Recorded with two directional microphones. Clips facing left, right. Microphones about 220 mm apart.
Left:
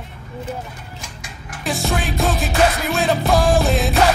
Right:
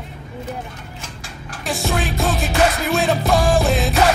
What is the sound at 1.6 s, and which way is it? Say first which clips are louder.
Music: even; centre (ahead or behind).